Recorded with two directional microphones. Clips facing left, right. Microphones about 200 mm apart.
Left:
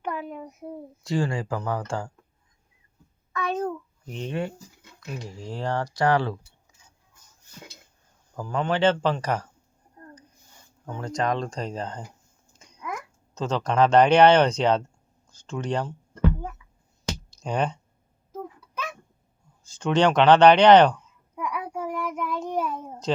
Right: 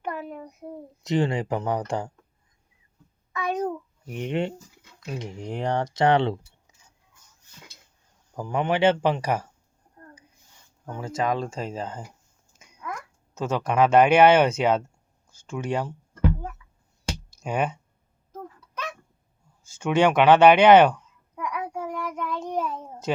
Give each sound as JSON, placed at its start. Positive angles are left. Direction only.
{"t": 0.0, "sound": "a sound", "side_deg": 0}
{"t": 1.0, "sound": "speech", "side_deg": -20}
{"t": 3.3, "sound": "a sound", "side_deg": -10}
{"t": 4.9, "sound": "speech", "side_deg": -20}
{"t": 8.4, "sound": "speech", "side_deg": -15}
{"t": 10.8, "sound": "speech", "side_deg": -10}
{"t": 13.3, "sound": "speech", "side_deg": -10}
{"t": 17.4, "sound": "speech", "side_deg": -5}
{"t": 19.7, "sound": "speech", "side_deg": -10}
{"t": 21.3, "sound": "child singing", "side_deg": 5}
{"t": 23.1, "sound": "speech", "side_deg": -10}